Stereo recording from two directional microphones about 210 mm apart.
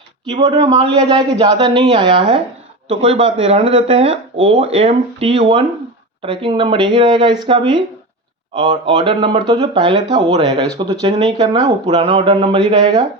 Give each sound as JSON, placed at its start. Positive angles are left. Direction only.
{"t": 0.4, "sound": "speech", "side_deg": -20}